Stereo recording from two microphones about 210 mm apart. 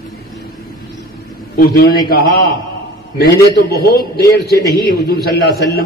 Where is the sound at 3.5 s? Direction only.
50° left (ahead or behind).